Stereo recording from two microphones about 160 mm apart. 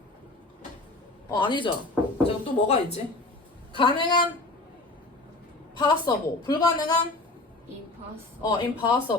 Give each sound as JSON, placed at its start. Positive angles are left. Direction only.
{"t": 1.3, "sound": "a woman's voice", "side_deg": 30}
{"t": 2.2, "sound": "speech", "side_deg": 40}
{"t": 3.8, "sound": "a woman's voice", "side_deg": 30}
{"t": 5.8, "sound": "a woman's voice", "side_deg": 25}
{"t": 8.4, "sound": "a woman's voice", "side_deg": 25}